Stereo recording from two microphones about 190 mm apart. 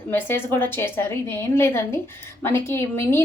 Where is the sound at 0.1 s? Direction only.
10° left (ahead or behind).